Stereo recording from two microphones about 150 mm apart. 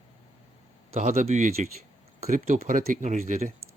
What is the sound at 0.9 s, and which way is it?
Speech, 50° right (ahead or behind).